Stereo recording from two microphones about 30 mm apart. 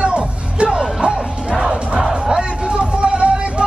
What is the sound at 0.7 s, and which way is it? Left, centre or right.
Music, centre.